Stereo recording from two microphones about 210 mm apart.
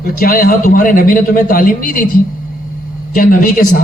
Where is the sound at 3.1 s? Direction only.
40° left (ahead or behind).